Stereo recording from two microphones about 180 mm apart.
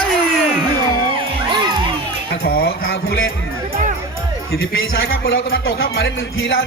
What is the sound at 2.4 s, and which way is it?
Music, 55° left (ahead or behind).